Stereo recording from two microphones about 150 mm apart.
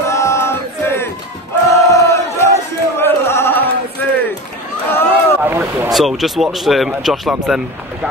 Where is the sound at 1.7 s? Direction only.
20° left (ahead or behind).